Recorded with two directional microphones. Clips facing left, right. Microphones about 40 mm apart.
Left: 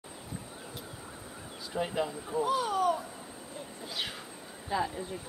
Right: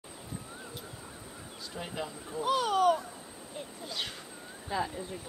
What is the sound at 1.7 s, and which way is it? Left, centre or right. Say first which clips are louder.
Speech: left 7 dB; centre.